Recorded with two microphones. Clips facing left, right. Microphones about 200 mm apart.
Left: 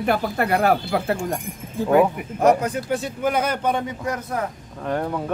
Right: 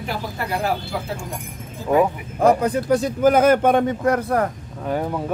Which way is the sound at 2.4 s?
35° right (ahead or behind).